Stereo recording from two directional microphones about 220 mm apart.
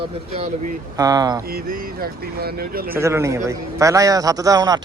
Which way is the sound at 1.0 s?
15° right (ahead or behind).